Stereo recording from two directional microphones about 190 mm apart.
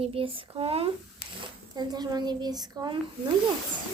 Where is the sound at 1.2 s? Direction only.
50° left (ahead or behind).